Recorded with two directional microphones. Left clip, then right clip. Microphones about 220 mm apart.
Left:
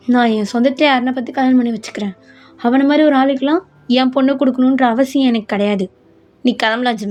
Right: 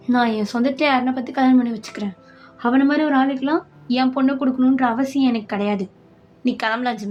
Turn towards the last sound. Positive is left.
turn(degrees=30)  # may be behind; listen again after turning